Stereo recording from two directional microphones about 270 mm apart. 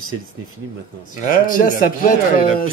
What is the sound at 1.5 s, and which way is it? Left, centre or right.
Speech, left.